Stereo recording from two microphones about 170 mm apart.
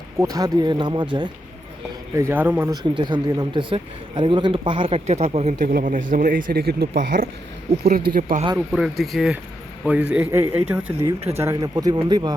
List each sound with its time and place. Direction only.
0.2 s speech: 20° right (ahead or behind)
2.1 s a man's voice: 15° right (ahead or behind)
3.0 s speech: 25° right (ahead or behind)
5.6 s speech: 55° right (ahead or behind)
8.5 s a man's voice: 5° right (ahead or behind); by 12.3 s 25° right (ahead or behind)